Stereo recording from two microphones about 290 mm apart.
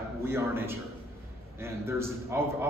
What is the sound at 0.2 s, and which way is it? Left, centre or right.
A man's voice, centre.